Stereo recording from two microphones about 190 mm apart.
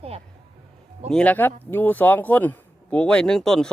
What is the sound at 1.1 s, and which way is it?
Speech, 5° left (ahead or behind).